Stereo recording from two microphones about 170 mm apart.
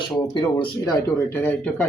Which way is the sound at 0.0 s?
25° left (ahead or behind).